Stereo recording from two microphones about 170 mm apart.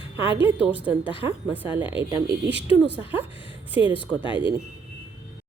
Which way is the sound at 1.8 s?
30° left (ahead or behind).